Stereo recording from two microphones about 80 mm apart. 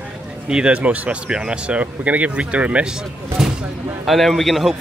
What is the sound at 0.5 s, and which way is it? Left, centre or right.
Speech, centre.